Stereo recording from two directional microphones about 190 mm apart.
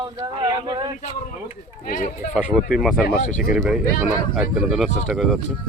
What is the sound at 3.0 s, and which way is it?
Speech, 40° left (ahead or behind).